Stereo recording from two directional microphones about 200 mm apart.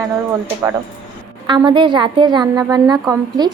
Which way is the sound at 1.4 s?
25° right (ahead or behind).